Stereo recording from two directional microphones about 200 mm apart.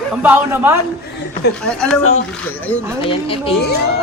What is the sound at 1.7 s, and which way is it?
Speech, 5° left (ahead or behind).